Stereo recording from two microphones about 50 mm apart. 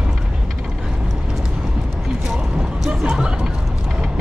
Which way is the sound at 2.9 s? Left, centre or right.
Centre.